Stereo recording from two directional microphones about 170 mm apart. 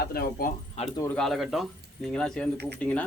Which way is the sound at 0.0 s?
65° left (ahead or behind).